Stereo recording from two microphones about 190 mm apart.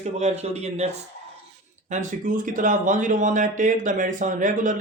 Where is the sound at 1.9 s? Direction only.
40° right (ahead or behind).